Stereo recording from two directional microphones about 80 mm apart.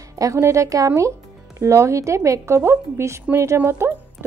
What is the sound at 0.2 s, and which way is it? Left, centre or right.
A woman's voice, right.